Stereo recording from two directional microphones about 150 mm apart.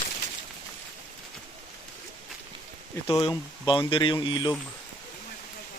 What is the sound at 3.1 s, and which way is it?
Speech, 35° left (ahead or behind).